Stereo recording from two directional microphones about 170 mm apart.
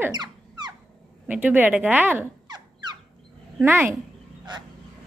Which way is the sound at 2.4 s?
25° right (ahead or behind).